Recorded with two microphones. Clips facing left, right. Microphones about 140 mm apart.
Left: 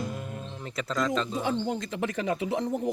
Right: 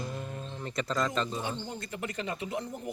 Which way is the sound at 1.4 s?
90° left.